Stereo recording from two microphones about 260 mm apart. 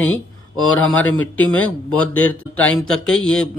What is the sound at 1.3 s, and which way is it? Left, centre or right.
Speech, centre.